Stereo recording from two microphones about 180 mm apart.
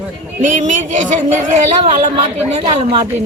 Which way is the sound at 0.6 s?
45° right (ahead or behind).